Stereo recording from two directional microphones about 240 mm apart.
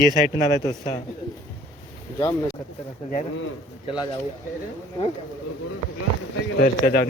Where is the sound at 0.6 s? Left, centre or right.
Centre.